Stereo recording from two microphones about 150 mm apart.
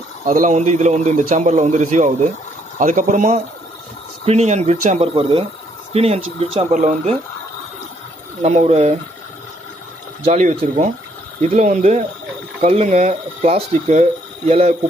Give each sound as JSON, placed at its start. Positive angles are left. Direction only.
{"t": 0.3, "sound": "a man's voice", "side_deg": -60}
{"t": 6.7, "sound": "speech", "side_deg": -55}
{"t": 8.4, "sound": "a man's voice", "side_deg": -50}
{"t": 10.2, "sound": "a man's voice", "side_deg": -45}
{"t": 11.4, "sound": "a man's voice", "side_deg": -55}